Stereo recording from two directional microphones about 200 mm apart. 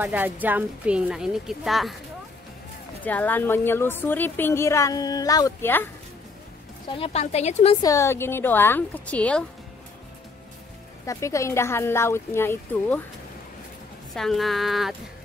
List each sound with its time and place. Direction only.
0.0 s a woman's voice: 10° right (ahead or behind)
3.0 s a woman's voice: 10° left (ahead or behind)
7.0 s a woman's voice: 30° left (ahead or behind)
7.8 s a woman's voice: 15° left (ahead or behind)
11.1 s a woman's voice: 15° left (ahead or behind)
14.1 s a woman's voice: centre (ahead or behind)